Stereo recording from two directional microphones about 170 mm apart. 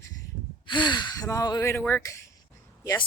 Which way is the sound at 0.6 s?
25° left (ahead or behind).